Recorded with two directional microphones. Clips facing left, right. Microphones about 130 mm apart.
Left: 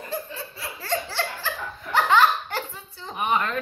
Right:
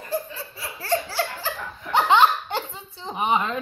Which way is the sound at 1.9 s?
20° right (ahead or behind).